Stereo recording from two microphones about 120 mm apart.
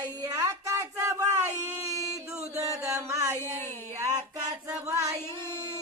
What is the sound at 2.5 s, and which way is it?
Music, 25° right (ahead or behind).